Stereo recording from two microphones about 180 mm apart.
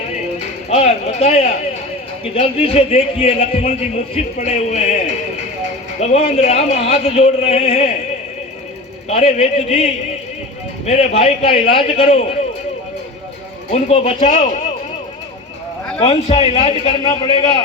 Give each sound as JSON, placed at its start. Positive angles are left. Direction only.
{"t": 0.7, "sound": "a man's voice", "side_deg": 35}
{"t": 9.0, "sound": "a man's voice", "side_deg": 35}
{"t": 13.7, "sound": "speech", "side_deg": 40}
{"t": 16.0, "sound": "a man's voice", "side_deg": 35}